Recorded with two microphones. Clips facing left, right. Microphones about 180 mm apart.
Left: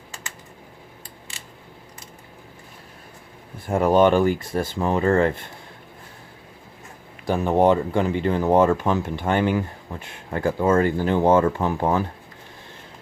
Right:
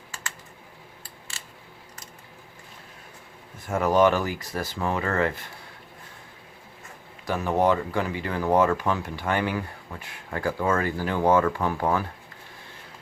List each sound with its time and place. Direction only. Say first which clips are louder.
0.1 s typing: even; 15° left (ahead or behind)
3.7 s speech: left 4 dB; 30° left (ahead or behind)
7.3 s speech: left 5 dB; 25° left (ahead or behind)